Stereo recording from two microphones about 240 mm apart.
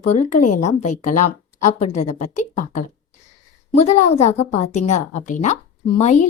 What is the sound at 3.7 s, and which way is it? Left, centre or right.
A woman's voice, left.